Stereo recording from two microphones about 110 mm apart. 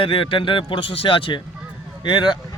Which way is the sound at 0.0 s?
55° left (ahead or behind).